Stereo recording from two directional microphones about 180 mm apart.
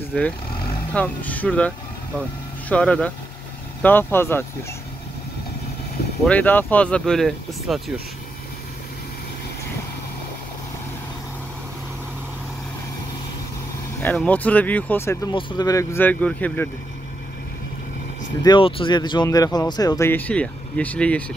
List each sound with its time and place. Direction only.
0.1 s speech: 5° left (ahead or behind)
2.7 s speech: 5° left (ahead or behind)
6.2 s speech: 10° left (ahead or behind)
14.0 s speech: 10° left (ahead or behind)
15.3 s speech: 25° left (ahead or behind)
18.4 s speech: 25° left (ahead or behind); by 21.2 s 5° left (ahead or behind)